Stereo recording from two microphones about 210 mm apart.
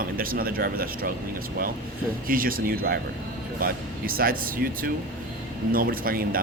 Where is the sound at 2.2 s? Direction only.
45° right (ahead or behind).